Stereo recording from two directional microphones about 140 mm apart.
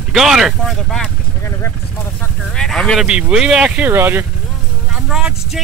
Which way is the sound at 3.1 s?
5° right (ahead or behind).